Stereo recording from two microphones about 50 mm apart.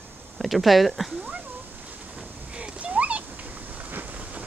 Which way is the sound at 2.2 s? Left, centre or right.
Right.